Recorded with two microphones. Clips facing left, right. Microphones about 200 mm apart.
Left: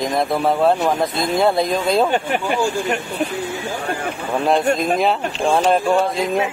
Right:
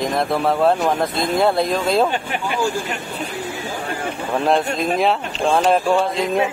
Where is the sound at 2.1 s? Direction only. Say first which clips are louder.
Left 4 dB; 50° left (ahead or behind).